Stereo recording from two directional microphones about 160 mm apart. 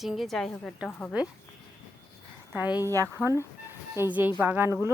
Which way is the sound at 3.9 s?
15° right (ahead or behind).